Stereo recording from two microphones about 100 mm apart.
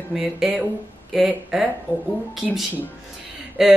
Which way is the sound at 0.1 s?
5° right (ahead or behind).